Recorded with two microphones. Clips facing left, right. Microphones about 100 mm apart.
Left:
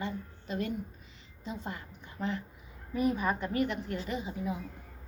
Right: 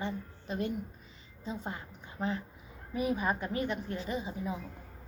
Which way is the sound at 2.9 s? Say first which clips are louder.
Left 2 dB; 10° right (ahead or behind).